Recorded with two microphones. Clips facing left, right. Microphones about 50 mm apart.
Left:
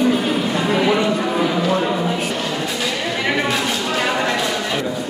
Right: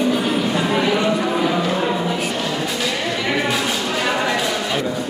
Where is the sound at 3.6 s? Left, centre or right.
Centre.